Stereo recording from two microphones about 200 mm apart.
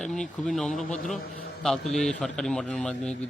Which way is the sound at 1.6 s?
Centre (ahead or behind).